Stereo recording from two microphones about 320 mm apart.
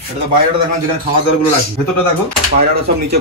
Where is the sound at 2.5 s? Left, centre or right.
Right.